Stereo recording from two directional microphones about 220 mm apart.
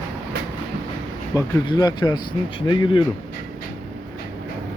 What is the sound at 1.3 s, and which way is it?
Speech, 15° left (ahead or behind).